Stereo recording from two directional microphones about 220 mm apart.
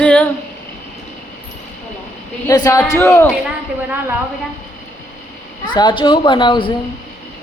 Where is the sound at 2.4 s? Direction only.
15° left (ahead or behind).